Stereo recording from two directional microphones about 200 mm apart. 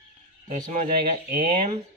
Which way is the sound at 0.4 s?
35° right (ahead or behind).